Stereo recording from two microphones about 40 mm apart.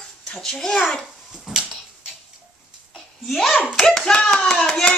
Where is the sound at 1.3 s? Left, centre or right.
Centre.